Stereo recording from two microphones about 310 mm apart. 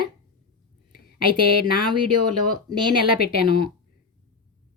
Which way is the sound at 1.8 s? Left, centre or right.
Right.